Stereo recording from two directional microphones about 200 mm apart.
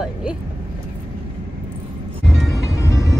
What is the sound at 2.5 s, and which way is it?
Music, 15° left (ahead or behind).